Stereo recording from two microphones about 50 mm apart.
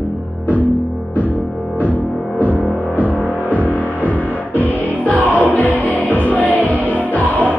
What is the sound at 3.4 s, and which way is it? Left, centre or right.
Music, left.